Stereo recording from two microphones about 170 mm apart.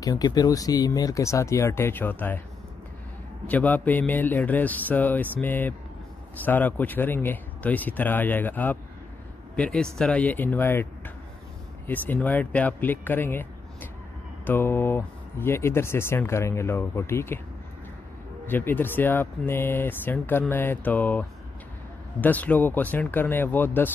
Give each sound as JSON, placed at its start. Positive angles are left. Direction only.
{"t": 0.0, "sound": "speech", "side_deg": 20}
{"t": 3.4, "sound": "speech", "side_deg": 10}
{"t": 11.9, "sound": "speech", "side_deg": 10}
{"t": 18.5, "sound": "speech", "side_deg": 10}